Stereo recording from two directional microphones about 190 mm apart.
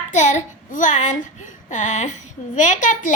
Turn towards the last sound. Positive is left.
turn(degrees=40)  # may be behind; listen again after turning